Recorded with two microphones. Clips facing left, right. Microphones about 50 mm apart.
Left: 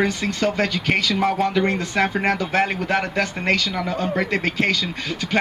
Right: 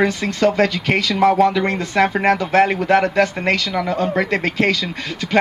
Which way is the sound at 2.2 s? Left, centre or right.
Right.